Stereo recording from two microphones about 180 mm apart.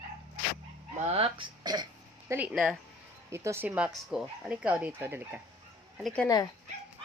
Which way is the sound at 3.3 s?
15° right (ahead or behind).